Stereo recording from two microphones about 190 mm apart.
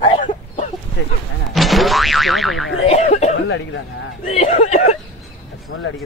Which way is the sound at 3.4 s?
90° left.